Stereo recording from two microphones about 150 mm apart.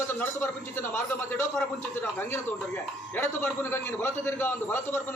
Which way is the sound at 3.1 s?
15° left (ahead or behind).